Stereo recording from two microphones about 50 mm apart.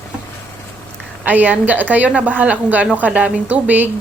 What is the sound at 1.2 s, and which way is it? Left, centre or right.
Speech, right.